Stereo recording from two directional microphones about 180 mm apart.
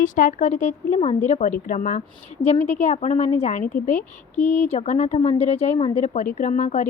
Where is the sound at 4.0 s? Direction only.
10° left (ahead or behind).